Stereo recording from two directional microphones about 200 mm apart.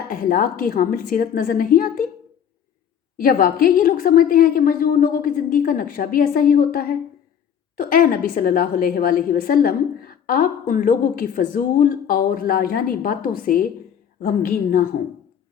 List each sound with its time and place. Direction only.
0.1 s a woman's voice: 45° left (ahead or behind)
3.2 s a woman's voice: 45° left (ahead or behind)